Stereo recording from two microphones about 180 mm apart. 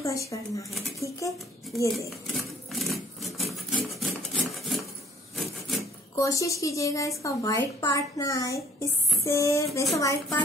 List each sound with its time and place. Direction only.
0.0 s a woman's voice: 15° left (ahead or behind)
2.0 s a sound: centre (ahead or behind)
3.7 s filing: centre (ahead or behind)
6.1 s a woman's voice: 20° left (ahead or behind)